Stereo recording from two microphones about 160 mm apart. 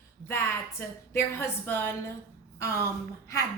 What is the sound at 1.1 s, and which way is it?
Speech, 15° left (ahead or behind).